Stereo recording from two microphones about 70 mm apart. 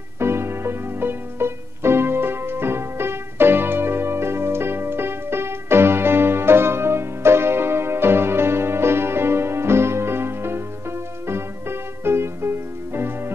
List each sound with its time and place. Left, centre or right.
0.2 s music: right
12.0 s music: right